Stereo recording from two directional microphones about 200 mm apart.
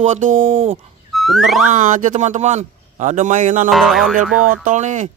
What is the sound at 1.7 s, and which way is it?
Speech, 40° right (ahead or behind).